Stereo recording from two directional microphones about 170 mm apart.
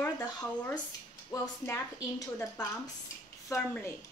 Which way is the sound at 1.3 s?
20° left (ahead or behind).